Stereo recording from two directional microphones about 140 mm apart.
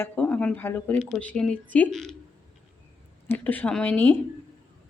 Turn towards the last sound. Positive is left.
turn(degrees=10)  # may be behind; listen again after turning